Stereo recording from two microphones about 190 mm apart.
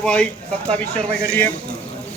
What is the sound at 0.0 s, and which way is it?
Speech, 5° left (ahead or behind).